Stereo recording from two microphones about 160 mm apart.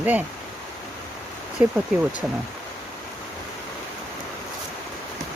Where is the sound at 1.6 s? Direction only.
10° right (ahead or behind).